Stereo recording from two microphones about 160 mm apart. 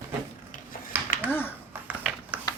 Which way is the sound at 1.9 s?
10° right (ahead or behind).